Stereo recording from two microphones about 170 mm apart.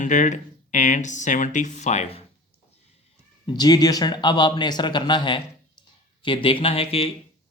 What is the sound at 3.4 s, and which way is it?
A man's voice, 25° left (ahead or behind).